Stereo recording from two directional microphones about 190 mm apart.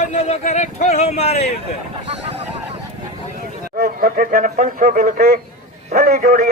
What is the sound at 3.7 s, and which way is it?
A man's voice, 50° right (ahead or behind).